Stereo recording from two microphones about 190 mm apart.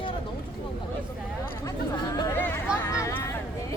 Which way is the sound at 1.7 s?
15° left (ahead or behind).